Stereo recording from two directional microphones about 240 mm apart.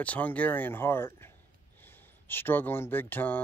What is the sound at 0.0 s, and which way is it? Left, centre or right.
Speech, centre.